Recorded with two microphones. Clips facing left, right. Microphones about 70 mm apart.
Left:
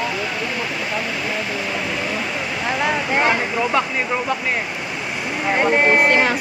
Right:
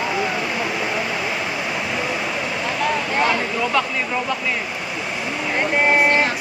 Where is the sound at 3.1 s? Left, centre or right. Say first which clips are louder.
Left 2 dB; left.